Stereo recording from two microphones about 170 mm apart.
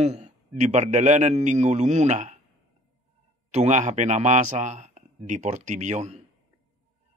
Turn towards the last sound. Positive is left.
turn(degrees=-40)  # may be behind; listen again after turning